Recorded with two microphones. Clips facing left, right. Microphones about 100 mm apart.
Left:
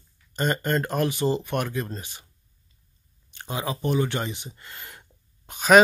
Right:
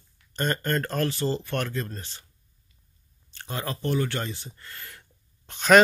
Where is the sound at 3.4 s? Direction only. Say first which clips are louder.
Left 3 dB; 15° left (ahead or behind).